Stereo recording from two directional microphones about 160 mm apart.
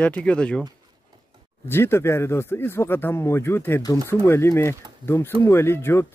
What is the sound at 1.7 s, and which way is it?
Speech, 15° left (ahead or behind).